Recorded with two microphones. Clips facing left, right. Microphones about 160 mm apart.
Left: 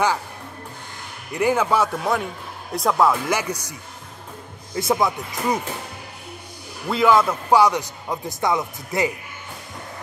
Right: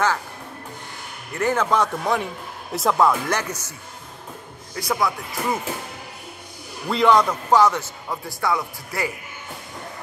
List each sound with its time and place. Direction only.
1.3 s a man's voice: 10° left (ahead or behind)
4.7 s speech: 25° left (ahead or behind)
6.9 s a man's voice: centre (ahead or behind); by 9.1 s 20° left (ahead or behind)